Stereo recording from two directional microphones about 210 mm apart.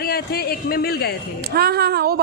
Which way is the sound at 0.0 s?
45° left (ahead or behind).